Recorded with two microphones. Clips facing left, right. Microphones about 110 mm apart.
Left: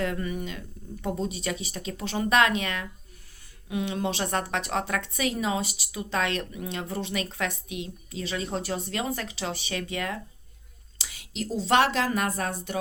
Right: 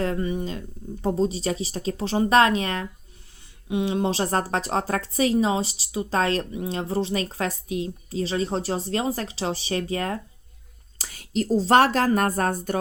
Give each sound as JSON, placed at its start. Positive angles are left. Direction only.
{"t": 0.0, "sound": "a woman's voice", "side_deg": -30}